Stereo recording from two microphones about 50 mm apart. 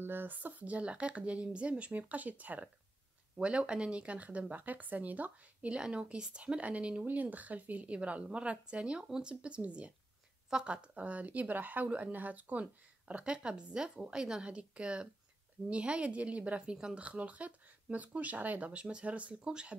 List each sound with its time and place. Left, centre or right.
0.0 s a woman's voice: right
5.8 s a woman's voice: centre
13.1 s a woman's voice: right
17.0 s a woman's voice: right
18.7 s a woman's voice: right